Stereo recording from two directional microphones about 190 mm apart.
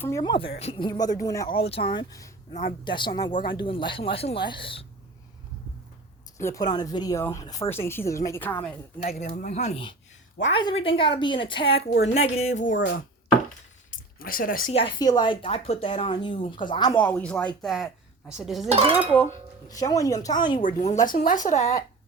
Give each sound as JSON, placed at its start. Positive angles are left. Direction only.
{"t": 0.0, "sound": "speech", "side_deg": 20}
{"t": 1.5, "sound": "speech", "side_deg": 30}
{"t": 2.5, "sound": "speech", "side_deg": 35}
{"t": 2.8, "sound": "speech", "side_deg": 25}
{"t": 6.3, "sound": "speech", "side_deg": 15}
{"t": 9.0, "sound": "speech", "side_deg": 35}
{"t": 13.9, "sound": "a sound", "side_deg": 50}
{"t": 14.7, "sound": "speech", "side_deg": 30}
{"t": 17.0, "sound": "speech", "side_deg": 10}
{"t": 18.7, "sound": "speech", "side_deg": -30}
{"t": 19.6, "sound": "speech", "side_deg": 20}
{"t": 20.6, "sound": "speech", "side_deg": 40}